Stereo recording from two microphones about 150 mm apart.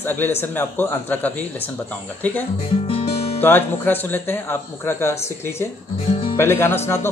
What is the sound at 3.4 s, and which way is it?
Speech, 15° left (ahead or behind).